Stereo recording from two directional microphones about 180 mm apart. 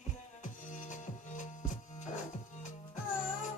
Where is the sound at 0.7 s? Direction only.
45° left (ahead or behind).